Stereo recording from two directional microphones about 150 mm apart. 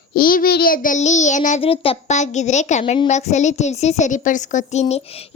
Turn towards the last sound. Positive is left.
turn(degrees=40)  # may be behind; listen again after turning